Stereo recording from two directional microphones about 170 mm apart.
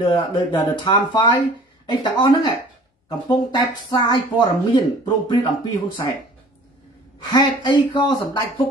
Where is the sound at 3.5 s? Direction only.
25° left (ahead or behind).